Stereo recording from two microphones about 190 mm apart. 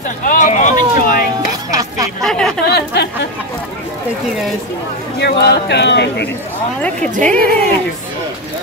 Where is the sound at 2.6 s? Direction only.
55° left (ahead or behind).